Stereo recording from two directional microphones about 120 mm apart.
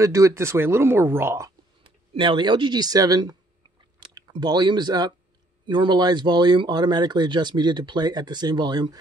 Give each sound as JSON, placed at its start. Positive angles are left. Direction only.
{"t": 0.0, "sound": "speech", "side_deg": -25}
{"t": 2.1, "sound": "speech", "side_deg": -40}